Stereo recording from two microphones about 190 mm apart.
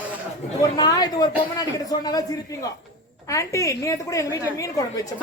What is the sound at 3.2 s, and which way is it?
A woman's voice, 15° left (ahead or behind).